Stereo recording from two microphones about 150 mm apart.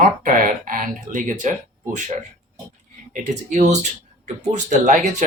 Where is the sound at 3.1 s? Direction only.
55° right (ahead or behind).